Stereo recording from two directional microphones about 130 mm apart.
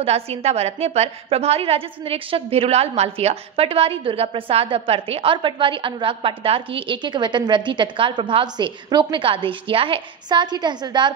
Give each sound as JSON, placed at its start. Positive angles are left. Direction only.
{"t": 0.0, "sound": "a woman's voice", "side_deg": -50}